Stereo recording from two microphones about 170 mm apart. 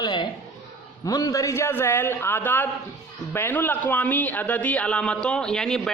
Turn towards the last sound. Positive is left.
turn(degrees=5)  # may be behind; listen again after turning